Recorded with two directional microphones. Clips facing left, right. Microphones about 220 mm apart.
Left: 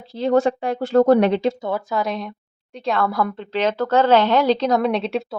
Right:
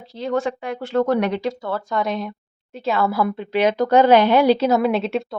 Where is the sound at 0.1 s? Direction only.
35° left (ahead or behind).